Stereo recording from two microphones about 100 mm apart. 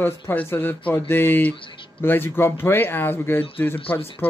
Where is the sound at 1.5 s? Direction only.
55° left (ahead or behind).